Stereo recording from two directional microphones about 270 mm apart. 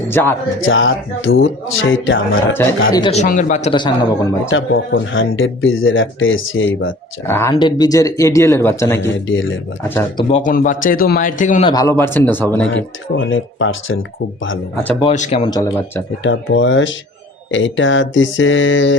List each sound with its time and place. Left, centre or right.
0.1 s speech: centre
0.6 s speech: left
2.9 s a man's voice: centre
4.4 s speech: left
7.3 s speech: centre
10.2 s a man's voice: left
11.7 s speech: centre
12.7 s speech: left
14.9 s a man's voice: left
16.2 s speech: left